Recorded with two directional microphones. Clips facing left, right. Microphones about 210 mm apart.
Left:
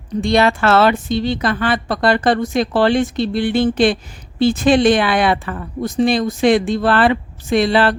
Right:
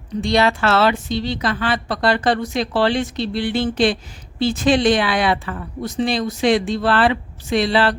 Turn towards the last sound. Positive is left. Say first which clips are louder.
# left 3 dB
turn(degrees=50)  # may be behind; listen again after turning